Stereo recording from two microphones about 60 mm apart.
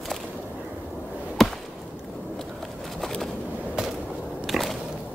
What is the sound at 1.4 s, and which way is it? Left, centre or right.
Chop, centre.